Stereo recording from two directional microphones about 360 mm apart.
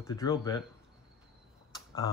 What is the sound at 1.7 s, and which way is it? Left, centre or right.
Tick, centre.